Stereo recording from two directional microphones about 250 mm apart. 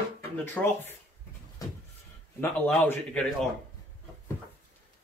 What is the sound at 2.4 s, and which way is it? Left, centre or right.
Speech, centre.